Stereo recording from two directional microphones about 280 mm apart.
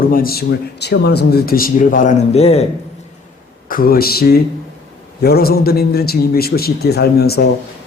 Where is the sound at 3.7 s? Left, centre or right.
Left.